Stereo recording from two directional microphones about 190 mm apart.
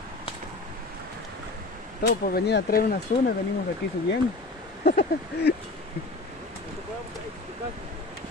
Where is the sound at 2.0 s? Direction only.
55° left (ahead or behind).